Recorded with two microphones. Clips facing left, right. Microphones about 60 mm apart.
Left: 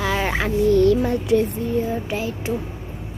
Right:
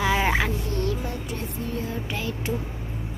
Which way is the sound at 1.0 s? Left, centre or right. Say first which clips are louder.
Left 13 dB; left.